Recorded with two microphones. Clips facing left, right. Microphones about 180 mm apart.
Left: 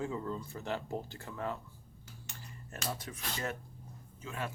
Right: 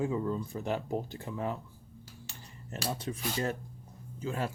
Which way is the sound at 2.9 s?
25° right (ahead or behind).